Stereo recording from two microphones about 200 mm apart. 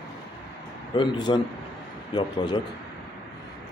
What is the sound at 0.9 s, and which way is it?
Speech, 25° left (ahead or behind).